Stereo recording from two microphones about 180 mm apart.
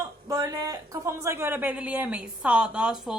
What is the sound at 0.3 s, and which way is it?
A woman's voice, 20° right (ahead or behind).